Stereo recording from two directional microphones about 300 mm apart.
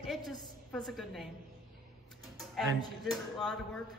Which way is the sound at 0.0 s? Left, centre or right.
Centre.